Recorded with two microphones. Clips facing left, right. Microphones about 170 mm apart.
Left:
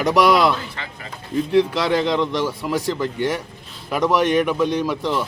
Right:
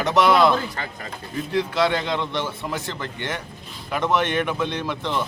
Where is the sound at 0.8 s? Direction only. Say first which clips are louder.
Right 2 dB; 40° right (ahead or behind).